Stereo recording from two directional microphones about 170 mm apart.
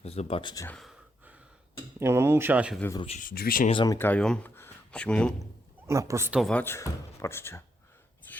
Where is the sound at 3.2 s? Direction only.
55° left (ahead or behind).